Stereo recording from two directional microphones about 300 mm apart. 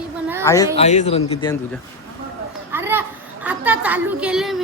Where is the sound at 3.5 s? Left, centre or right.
Centre.